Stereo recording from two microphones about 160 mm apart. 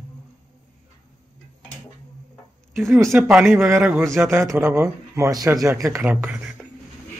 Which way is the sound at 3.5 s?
15° right (ahead or behind).